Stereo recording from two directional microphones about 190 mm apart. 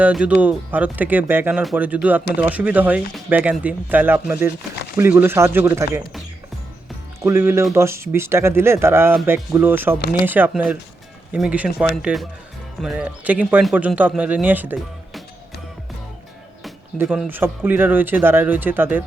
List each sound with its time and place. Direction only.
0.0 s speech: 5° right (ahead or behind)
7.2 s speech: 15° right (ahead or behind)
17.0 s speech: 5° right (ahead or behind)